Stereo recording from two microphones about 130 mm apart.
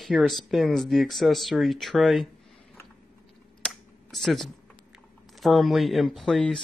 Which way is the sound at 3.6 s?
Centre (ahead or behind).